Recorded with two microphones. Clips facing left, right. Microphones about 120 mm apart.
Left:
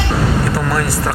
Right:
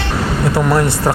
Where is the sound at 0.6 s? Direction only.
25° right (ahead or behind).